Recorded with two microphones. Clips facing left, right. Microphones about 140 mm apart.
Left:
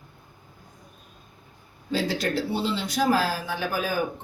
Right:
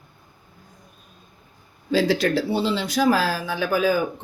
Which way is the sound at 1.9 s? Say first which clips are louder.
Right 6 dB; 90° right.